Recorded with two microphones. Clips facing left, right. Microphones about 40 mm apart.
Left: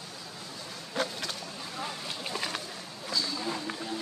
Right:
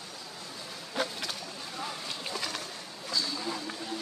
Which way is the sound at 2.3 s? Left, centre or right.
Left.